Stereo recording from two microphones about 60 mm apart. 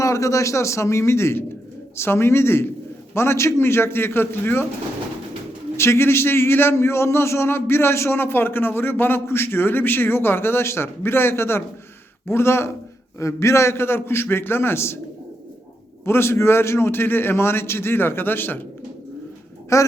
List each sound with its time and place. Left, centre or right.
0.0 s a man's voice: left
5.7 s a man's voice: left
16.0 s a man's voice: left
19.7 s a man's voice: left